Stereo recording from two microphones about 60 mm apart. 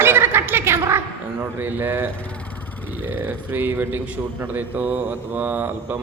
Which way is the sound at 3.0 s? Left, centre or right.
Right.